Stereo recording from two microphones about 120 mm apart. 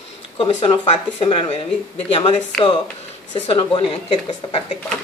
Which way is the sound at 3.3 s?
45° left (ahead or behind).